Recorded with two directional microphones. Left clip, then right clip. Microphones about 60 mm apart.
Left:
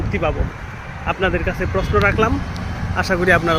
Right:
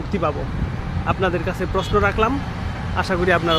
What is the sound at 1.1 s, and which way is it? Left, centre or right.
Speech, centre.